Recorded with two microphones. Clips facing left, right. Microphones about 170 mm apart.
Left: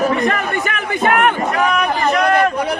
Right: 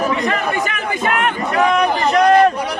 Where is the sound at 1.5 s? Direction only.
35° right (ahead or behind).